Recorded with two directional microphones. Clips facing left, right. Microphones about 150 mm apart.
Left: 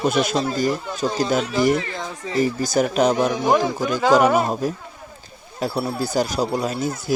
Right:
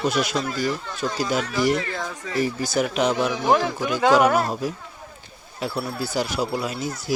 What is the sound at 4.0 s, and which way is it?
Speech, centre (ahead or behind).